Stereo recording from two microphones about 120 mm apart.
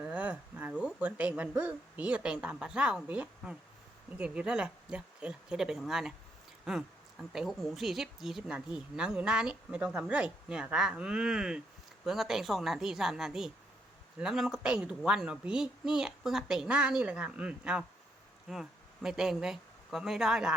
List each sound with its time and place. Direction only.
0.0 s a woman's voice: 10° right (ahead or behind)